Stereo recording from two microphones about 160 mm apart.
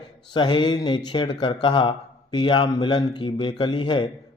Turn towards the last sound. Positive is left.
turn(degrees=30)  # may be behind; listen again after turning